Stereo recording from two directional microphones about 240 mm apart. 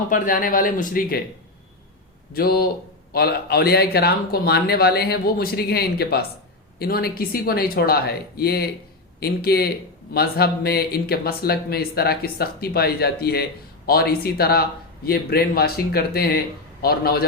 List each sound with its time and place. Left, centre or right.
0.1 s speech: left
2.3 s speech: left